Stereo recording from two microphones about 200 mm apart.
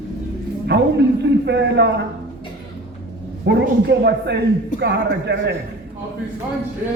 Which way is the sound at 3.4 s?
60° right (ahead or behind).